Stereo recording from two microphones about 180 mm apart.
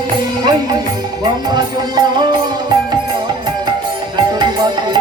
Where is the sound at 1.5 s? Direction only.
25° right (ahead or behind).